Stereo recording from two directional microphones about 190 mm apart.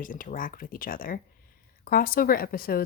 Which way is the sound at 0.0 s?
45° left (ahead or behind).